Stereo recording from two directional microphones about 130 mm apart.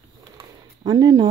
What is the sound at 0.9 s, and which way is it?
Speech, 30° right (ahead or behind).